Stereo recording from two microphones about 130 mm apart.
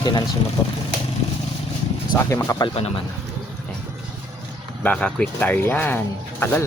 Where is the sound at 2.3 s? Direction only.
20° left (ahead or behind).